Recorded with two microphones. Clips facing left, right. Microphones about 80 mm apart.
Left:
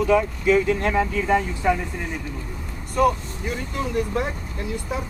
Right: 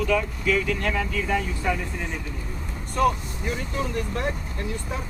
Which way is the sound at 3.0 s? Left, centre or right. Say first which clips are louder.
Left 2 dB; centre.